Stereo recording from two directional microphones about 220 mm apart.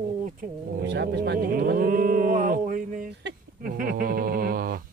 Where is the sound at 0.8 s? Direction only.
50° right (ahead or behind).